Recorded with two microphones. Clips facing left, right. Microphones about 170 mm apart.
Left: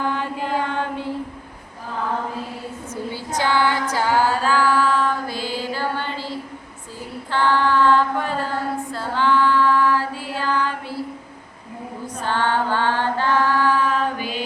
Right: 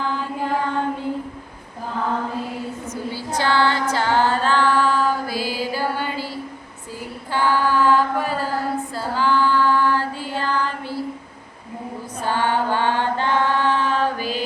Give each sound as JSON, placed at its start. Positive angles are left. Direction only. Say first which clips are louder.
{"t": 0.0, "sound": "mantra", "louder": "left 1 dB", "side_deg": 60}
{"t": 2.9, "sound": "female singing", "louder": "left 1 dB", "side_deg": 20}
{"t": 7.3, "sound": "chant", "louder": "left 1 dB", "side_deg": -10}
{"t": 9.0, "sound": "female singing", "louder": "left 1 dB", "side_deg": -5}
{"t": 12.2, "sound": "chant", "louder": "right 1 dB", "side_deg": -10}